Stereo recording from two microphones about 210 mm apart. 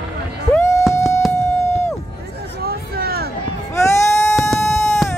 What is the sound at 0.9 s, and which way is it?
Music, 15° left (ahead or behind).